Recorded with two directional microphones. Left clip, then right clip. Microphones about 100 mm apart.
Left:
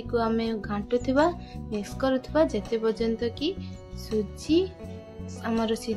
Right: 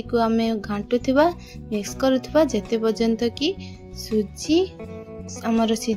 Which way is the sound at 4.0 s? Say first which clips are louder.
Right 5 dB; 55° right (ahead or behind).